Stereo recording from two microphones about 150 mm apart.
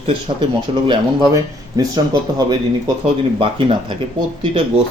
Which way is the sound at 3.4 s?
35° right (ahead or behind).